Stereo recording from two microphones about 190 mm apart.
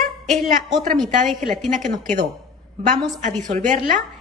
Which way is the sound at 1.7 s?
40° right (ahead or behind).